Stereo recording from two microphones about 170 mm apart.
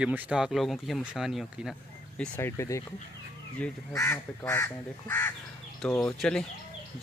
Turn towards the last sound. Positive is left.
turn(degrees=5)  # may be behind; listen again after turning